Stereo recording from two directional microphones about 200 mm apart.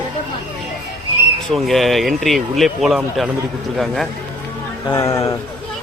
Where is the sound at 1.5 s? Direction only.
Centre (ahead or behind).